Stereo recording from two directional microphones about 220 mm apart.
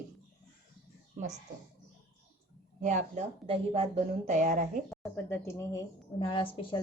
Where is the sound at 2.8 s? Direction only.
35° right (ahead or behind).